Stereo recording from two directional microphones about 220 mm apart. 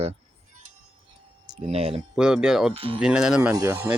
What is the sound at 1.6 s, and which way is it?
Speech, 25° right (ahead or behind).